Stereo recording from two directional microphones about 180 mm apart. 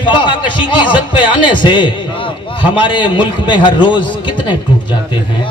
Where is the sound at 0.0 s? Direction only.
25° left (ahead or behind).